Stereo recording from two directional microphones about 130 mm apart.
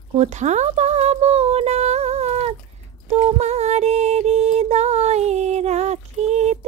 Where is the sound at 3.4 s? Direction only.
55° right (ahead or behind).